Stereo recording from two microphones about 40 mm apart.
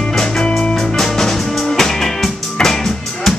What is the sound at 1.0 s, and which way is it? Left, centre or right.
Music, centre.